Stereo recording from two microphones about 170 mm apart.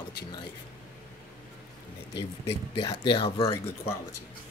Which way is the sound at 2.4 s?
35° left (ahead or behind).